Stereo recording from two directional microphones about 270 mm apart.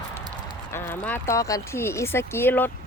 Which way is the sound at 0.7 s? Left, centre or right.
Centre.